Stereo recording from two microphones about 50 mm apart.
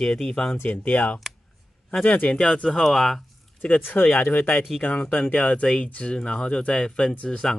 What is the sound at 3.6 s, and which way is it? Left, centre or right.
Speech, left.